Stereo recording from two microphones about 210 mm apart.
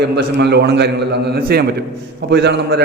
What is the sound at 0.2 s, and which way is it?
A man's voice, 55° right (ahead or behind).